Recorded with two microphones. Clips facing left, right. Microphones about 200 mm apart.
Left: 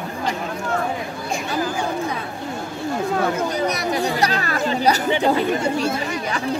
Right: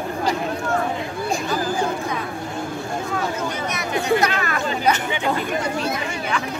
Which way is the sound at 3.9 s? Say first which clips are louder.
Right 1 dB; 35° left (ahead or behind).